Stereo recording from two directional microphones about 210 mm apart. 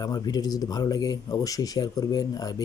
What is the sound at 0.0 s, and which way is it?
Speech, 20° left (ahead or behind).